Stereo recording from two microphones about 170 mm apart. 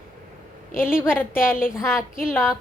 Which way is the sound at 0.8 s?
5° right (ahead or behind).